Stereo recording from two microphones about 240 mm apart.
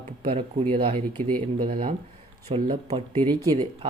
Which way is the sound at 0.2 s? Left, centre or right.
Right.